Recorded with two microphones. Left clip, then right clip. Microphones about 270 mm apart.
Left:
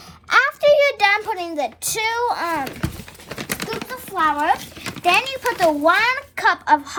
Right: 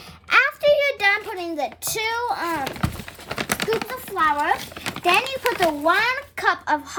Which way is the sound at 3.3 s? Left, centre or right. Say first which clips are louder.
Right 3 dB; centre.